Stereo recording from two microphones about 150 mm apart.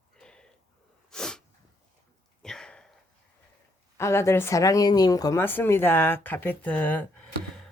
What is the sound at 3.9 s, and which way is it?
Speech, 20° left (ahead or behind).